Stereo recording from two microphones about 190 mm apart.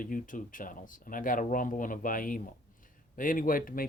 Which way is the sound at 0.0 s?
45° left (ahead or behind).